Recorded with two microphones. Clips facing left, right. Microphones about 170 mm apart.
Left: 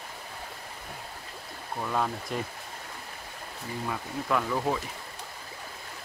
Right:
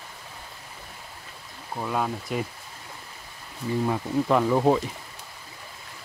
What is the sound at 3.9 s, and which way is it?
Speech, 30° right (ahead or behind).